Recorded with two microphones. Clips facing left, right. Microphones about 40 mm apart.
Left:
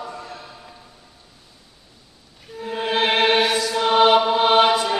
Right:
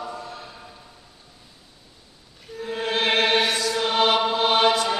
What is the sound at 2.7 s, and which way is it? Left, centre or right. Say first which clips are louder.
Music: left 2 dB; centre.